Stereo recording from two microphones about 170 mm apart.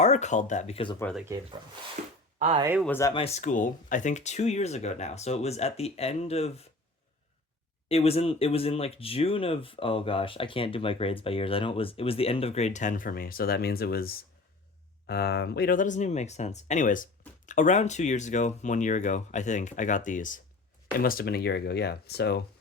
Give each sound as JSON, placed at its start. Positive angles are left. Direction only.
{"t": 0.0, "sound": "speech", "side_deg": 40}
{"t": 1.1, "sound": "speech", "side_deg": 5}
{"t": 2.0, "sound": "speech", "side_deg": -50}
{"t": 2.8, "sound": "speech", "side_deg": 10}
{"t": 3.1, "sound": "speech", "side_deg": 35}
{"t": 7.9, "sound": "speech", "side_deg": 35}